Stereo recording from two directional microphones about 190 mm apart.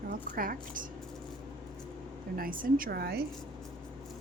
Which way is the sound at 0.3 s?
45° right (ahead or behind).